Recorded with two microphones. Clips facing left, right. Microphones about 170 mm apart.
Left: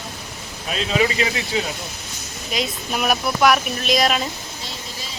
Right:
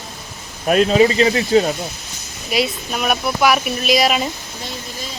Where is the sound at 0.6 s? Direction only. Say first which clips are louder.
Right 11 dB; 50° right (ahead or behind).